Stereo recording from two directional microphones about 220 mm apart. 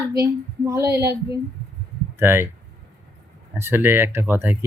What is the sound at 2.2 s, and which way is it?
Speech, 10° right (ahead or behind).